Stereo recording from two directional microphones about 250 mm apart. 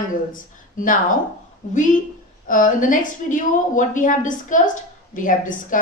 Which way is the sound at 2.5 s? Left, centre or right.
Left.